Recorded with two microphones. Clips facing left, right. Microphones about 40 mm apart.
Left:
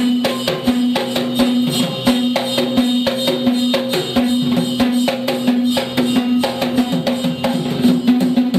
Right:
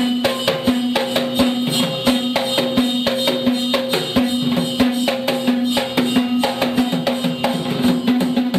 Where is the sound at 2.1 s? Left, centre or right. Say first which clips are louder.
Left 3 dB; centre.